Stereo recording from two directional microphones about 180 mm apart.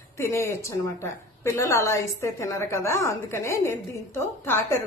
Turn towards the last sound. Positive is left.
turn(degrees=15)  # may be behind; listen again after turning